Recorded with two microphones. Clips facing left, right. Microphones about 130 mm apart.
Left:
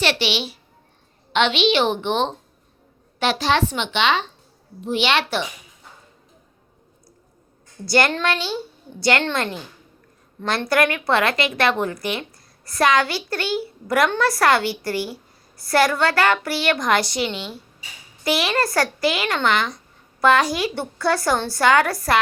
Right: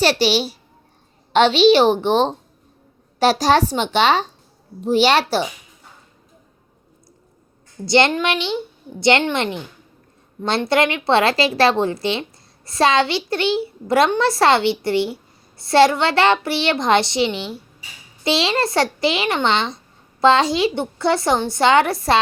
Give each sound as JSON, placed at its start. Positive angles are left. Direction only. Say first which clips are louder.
{"t": 0.0, "sound": "a child's voice", "louder": "right 5 dB", "side_deg": -40}
{"t": 7.9, "sound": "a woman's voice", "louder": "right 3 dB", "side_deg": -25}
{"t": 10.7, "sound": "a woman's voice", "louder": "right 2 dB", "side_deg": -25}